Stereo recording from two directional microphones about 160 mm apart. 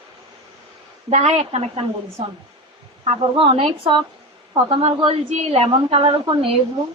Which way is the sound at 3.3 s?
35° right (ahead or behind).